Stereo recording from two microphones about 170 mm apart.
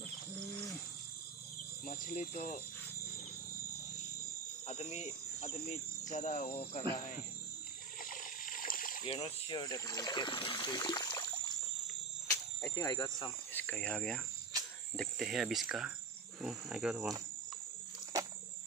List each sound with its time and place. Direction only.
1.9 s speech: 50° left (ahead or behind)
4.6 s cricket: 40° left (ahead or behind)
8.0 s splash: 55° left (ahead or behind)
9.0 s speech: 30° left (ahead or behind)
12.3 s speech: 20° left (ahead or behind)
13.5 s speech: 10° left (ahead or behind)
15.0 s cricket: centre (ahead or behind)